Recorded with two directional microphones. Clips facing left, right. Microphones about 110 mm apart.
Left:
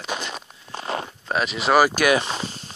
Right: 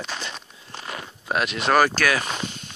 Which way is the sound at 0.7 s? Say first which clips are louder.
Left 7 dB; 35° left (ahead or behind).